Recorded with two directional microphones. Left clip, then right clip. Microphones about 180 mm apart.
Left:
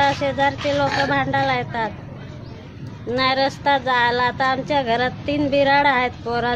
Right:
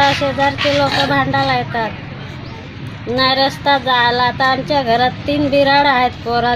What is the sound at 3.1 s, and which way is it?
Speech, 30° left (ahead or behind).